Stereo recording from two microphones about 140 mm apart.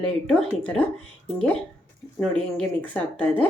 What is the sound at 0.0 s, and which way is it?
Speech, 5° left (ahead or behind).